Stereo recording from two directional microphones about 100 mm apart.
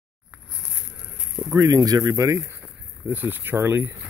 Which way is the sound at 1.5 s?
35° right (ahead or behind).